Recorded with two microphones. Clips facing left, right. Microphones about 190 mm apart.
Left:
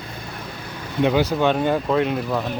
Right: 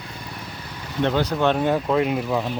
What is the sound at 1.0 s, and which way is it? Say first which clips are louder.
Speech: left 2 dB; 10° left (ahead or behind).